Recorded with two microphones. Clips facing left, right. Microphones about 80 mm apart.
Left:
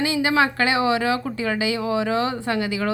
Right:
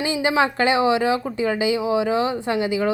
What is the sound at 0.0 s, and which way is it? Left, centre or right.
Speech, right.